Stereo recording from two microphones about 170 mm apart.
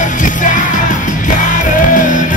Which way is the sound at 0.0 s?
50° left (ahead or behind).